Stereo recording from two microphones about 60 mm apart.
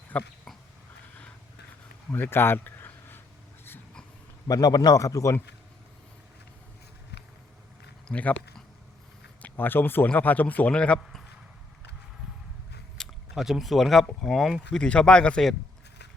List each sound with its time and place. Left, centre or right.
0.1 s a man's voice: left
2.1 s a sound: left
4.4 s a man's voice: left
8.1 s a man's voice: left
9.4 s a man's voice: left; by 11.0 s centre
13.0 s biting: centre
13.3 s speech: centre
14.7 s speech: centre